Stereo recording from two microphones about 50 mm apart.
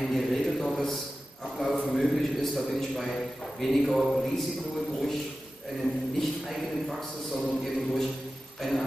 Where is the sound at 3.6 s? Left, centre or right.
Centre.